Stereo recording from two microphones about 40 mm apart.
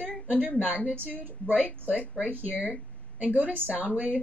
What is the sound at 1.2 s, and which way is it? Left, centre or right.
Speech, right.